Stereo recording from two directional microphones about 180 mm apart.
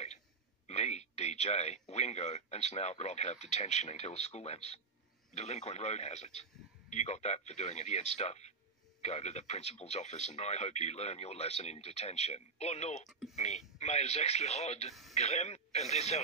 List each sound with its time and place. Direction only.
0.7 s speech: 35° left (ahead or behind)
13.1 s speech: centre (ahead or behind)
13.7 s speech: 40° left (ahead or behind)